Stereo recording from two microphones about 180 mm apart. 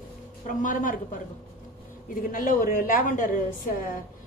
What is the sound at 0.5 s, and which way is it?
Speech, 45° left (ahead or behind).